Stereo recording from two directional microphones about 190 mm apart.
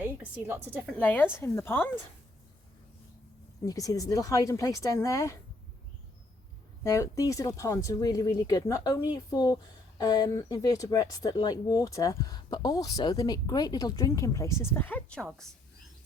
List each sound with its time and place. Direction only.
0.0 s a woman's voice: 10° right (ahead or behind)
0.9 s speech: 10° left (ahead or behind)
3.7 s speech: 20° left (ahead or behind)
6.8 s speech: 15° left (ahead or behind)